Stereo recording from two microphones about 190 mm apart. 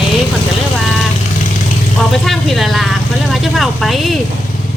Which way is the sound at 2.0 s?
Centre (ahead or behind).